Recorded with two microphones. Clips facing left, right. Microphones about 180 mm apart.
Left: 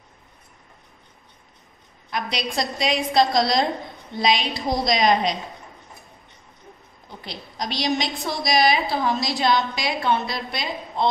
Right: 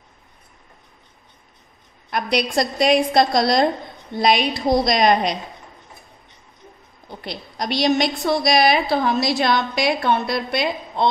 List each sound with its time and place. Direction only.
2.0 s a woman's voice: 60° right (ahead or behind)
7.2 s a woman's voice: 60° right (ahead or behind)